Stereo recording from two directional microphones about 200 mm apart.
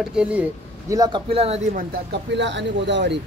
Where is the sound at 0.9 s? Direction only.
20° right (ahead or behind).